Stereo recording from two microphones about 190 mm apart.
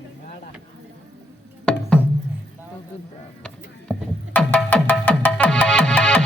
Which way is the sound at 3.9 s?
5° left (ahead or behind).